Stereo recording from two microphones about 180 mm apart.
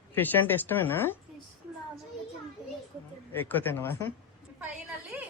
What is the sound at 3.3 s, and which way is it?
Speech, 10° left (ahead or behind).